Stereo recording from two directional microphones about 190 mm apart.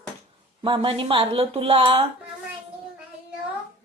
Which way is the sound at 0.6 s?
25° right (ahead or behind).